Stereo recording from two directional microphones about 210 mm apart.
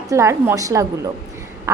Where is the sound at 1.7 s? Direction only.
15° right (ahead or behind).